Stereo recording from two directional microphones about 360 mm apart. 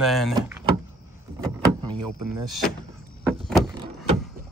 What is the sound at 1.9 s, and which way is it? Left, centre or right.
Speech, right.